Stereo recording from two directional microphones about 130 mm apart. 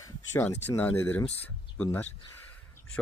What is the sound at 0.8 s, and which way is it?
Speech, 15° left (ahead or behind).